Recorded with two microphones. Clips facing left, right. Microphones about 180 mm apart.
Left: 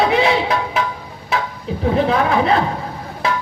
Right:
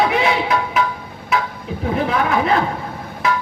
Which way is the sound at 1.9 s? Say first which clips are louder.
Left 2 dB; 30° left (ahead or behind).